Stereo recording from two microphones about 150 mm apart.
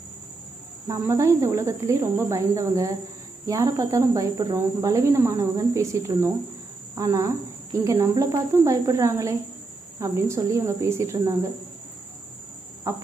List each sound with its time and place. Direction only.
0.9 s speech: 20° right (ahead or behind)
12.9 s speech: 20° right (ahead or behind)